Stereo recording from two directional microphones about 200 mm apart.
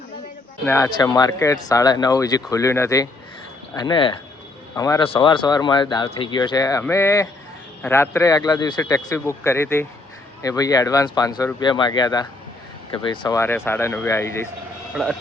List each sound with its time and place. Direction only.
0.6 s speech: 15° left (ahead or behind)